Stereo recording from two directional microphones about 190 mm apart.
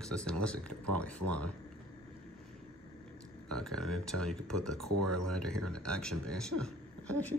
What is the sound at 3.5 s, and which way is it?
Speech, 5° left (ahead or behind).